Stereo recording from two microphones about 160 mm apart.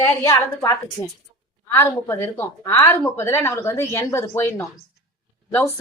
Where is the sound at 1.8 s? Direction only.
15° left (ahead or behind).